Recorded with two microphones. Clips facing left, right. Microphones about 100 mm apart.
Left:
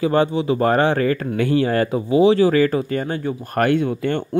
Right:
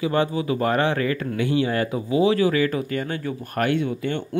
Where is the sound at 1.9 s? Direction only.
30° left (ahead or behind).